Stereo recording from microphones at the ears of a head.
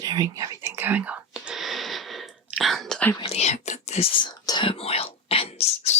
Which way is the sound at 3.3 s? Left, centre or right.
Left.